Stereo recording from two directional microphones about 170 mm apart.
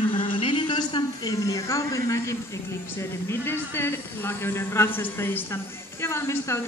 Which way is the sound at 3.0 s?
15° left (ahead or behind).